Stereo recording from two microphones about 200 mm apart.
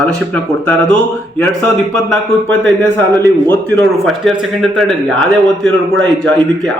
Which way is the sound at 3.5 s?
5° left (ahead or behind).